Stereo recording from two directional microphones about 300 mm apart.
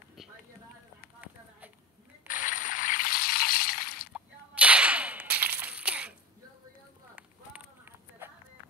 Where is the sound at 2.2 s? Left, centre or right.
Left.